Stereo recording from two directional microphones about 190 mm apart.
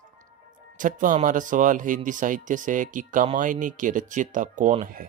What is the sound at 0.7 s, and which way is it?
Speech, 45° right (ahead or behind).